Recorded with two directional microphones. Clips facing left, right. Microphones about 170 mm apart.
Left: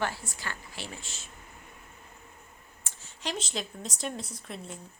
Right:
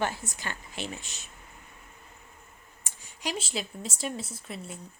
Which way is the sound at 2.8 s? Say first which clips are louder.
Right 1 dB; 10° right (ahead or behind).